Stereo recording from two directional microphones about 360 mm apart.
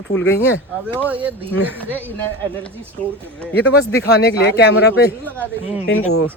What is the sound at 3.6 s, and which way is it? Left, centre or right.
Speech, left.